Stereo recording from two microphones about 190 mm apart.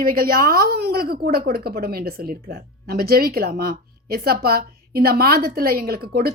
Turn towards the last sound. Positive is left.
turn(degrees=-55)  # may be behind; listen again after turning